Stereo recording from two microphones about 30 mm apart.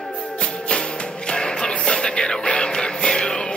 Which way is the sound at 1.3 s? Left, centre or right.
Left.